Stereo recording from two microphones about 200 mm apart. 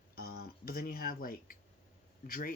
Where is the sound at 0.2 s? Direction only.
50° left (ahead or behind).